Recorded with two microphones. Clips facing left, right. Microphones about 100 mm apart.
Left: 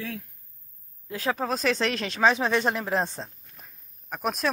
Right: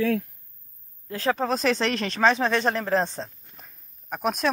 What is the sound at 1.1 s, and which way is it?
Speech, 5° left (ahead or behind).